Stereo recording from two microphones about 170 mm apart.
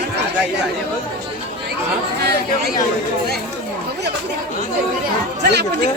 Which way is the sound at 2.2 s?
70° right (ahead or behind).